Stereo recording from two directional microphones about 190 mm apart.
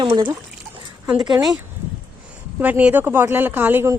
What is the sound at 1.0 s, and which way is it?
Speech, 5° right (ahead or behind).